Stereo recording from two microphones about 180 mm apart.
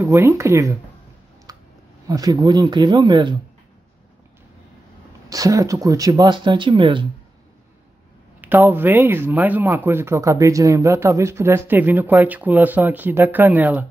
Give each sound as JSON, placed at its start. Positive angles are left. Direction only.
{"t": 0.0, "sound": "speech", "side_deg": -15}
{"t": 2.0, "sound": "speech", "side_deg": -20}
{"t": 5.3, "sound": "speech", "side_deg": -20}
{"t": 8.4, "sound": "speech", "side_deg": -10}